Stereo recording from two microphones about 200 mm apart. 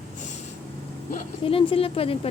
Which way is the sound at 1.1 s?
30° left (ahead or behind).